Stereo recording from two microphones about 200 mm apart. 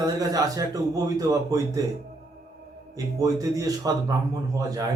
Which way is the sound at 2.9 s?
20° right (ahead or behind).